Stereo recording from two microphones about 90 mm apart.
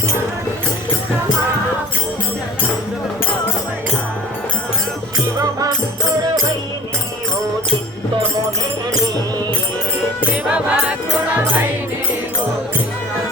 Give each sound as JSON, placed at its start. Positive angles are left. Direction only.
{"t": 5.4, "sound": "music", "side_deg": -45}
{"t": 10.2, "sound": "music", "side_deg": -15}